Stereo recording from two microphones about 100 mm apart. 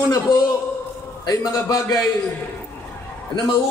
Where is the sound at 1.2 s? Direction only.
40° left (ahead or behind).